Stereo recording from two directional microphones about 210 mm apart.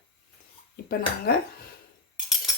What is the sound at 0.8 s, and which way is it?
Speech, 50° left (ahead or behind).